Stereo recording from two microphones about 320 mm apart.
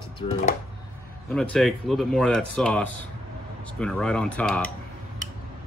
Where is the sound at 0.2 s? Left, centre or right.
Centre.